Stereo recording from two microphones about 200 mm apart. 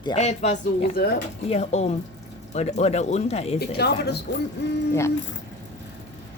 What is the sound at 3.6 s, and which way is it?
Speech, 55° left (ahead or behind).